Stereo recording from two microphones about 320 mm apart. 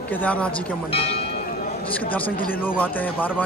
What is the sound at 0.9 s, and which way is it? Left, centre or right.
Speech, centre.